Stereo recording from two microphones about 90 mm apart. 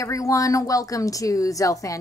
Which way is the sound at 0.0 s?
40° left (ahead or behind).